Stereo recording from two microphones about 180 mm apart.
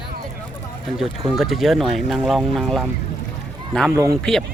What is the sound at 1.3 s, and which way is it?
Speech, centre (ahead or behind).